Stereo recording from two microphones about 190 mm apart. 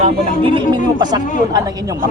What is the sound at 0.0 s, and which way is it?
Speech, 25° right (ahead or behind).